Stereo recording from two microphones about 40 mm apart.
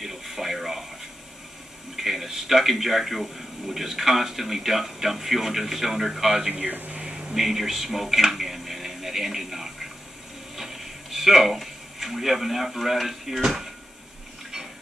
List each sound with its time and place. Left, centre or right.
0.0 s television: centre
2.0 s a man's voice: centre
6.5 s speech: right
7.0 s a sound: right
7.3 s speech: centre
10.5 s a sound: centre
13.4 s speech: centre